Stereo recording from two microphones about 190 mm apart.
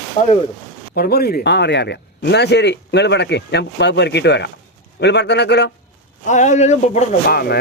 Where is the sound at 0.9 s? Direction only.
55° left (ahead or behind).